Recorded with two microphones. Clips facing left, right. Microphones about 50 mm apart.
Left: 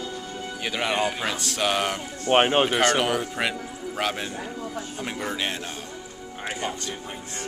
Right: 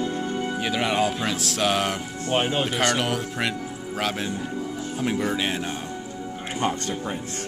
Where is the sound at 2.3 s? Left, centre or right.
Left.